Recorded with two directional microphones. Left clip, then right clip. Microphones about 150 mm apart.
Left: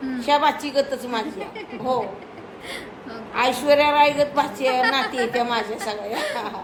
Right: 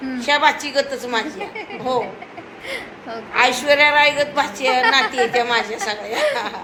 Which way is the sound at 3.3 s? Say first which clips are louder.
Right 2 dB; 15° left (ahead or behind).